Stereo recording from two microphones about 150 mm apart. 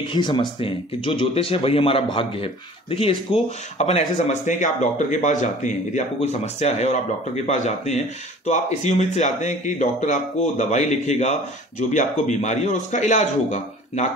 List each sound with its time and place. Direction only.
0.1 s a man's voice: 30° left (ahead or behind); by 14.1 s 50° left (ahead or behind)